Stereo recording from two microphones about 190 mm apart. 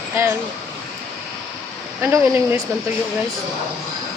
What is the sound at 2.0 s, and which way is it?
Speech, 10° right (ahead or behind).